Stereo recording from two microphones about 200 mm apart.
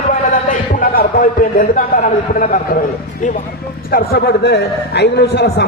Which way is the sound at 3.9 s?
55° left (ahead or behind).